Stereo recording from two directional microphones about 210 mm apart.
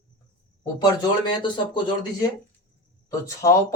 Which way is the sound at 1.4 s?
20° left (ahead or behind).